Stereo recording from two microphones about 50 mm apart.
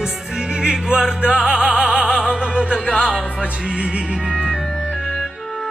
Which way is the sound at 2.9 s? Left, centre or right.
Left.